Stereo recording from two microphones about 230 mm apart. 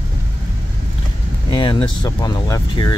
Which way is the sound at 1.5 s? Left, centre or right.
Centre.